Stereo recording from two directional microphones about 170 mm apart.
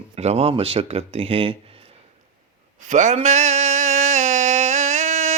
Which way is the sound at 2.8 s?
45° right (ahead or behind).